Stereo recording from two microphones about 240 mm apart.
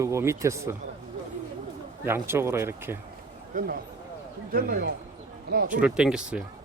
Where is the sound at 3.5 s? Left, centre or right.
Right.